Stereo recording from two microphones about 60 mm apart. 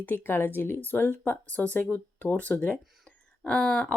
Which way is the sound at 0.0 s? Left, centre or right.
Left.